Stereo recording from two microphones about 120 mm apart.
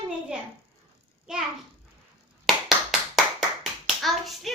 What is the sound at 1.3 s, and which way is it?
Speech, 5° right (ahead or behind).